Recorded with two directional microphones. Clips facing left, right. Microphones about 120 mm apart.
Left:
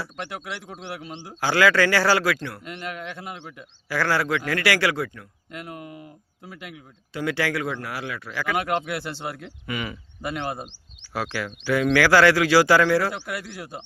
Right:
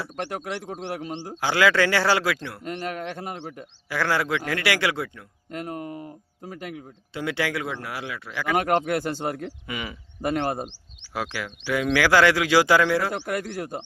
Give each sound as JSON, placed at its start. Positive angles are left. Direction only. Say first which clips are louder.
{"t": 0.3, "sound": "a man's voice", "louder": "right 4 dB", "side_deg": -40}
{"t": 1.4, "sound": "a man's voice", "louder": "left 1 dB", "side_deg": -20}
{"t": 2.6, "sound": "speech", "louder": "right 8 dB", "side_deg": -40}
{"t": 3.8, "sound": "a man's voice", "louder": "left 1 dB", "side_deg": -20}
{"t": 5.5, "sound": "speech", "louder": "right 5 dB", "side_deg": -40}
{"t": 7.1, "sound": "a man's voice", "louder": "left 2 dB", "side_deg": -20}
{"t": 8.5, "sound": "a man's voice", "louder": "right 5 dB", "side_deg": -45}
{"t": 9.6, "sound": "speech", "louder": "left 7 dB", "side_deg": -15}
{"t": 10.2, "sound": "a man's voice", "louder": "right 5 dB", "side_deg": -45}
{"t": 11.1, "sound": "speech", "louder": "left 2 dB", "side_deg": -15}
{"t": 13.1, "sound": "a man's voice", "louder": "right 3 dB", "side_deg": -45}